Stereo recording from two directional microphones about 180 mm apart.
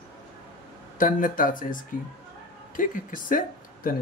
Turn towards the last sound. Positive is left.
turn(degrees=50)  # may be behind; listen again after turning